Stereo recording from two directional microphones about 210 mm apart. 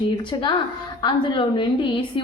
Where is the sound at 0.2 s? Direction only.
25° left (ahead or behind).